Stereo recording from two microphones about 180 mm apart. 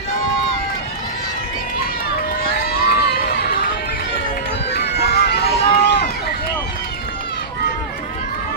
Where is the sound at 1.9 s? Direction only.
55° left (ahead or behind).